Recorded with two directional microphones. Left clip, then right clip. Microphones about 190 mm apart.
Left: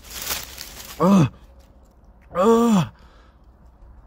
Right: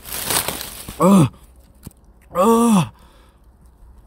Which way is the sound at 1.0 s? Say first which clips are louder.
Right 4 dB; 20° right (ahead or behind).